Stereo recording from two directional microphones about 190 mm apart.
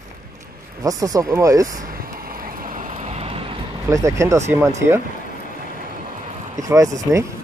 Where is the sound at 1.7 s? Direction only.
50° right (ahead or behind); by 3.5 s 30° right (ahead or behind).